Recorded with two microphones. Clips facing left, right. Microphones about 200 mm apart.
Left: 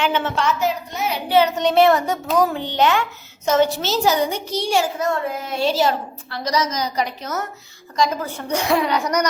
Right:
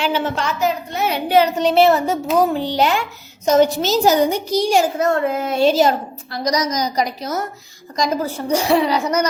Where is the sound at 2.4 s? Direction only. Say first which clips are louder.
Right 1 dB; 35° right (ahead or behind).